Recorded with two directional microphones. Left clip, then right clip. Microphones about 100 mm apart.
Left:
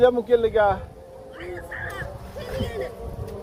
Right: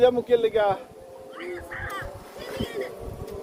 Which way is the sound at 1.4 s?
40° right (ahead or behind).